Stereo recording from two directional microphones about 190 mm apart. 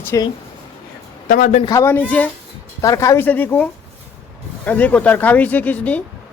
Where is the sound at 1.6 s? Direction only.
15° left (ahead or behind).